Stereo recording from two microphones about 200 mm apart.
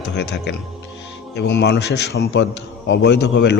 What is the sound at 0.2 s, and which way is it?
A man's voice, 55° left (ahead or behind).